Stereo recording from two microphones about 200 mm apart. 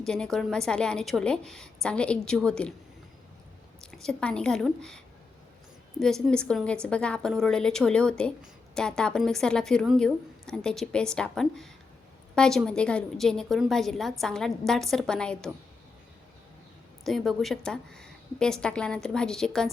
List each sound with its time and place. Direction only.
0.0 s a woman's voice: 5° left (ahead or behind)
3.9 s a woman's voice: 5° left (ahead or behind)
6.0 s a woman's voice: centre (ahead or behind)
17.0 s a woman's voice: centre (ahead or behind)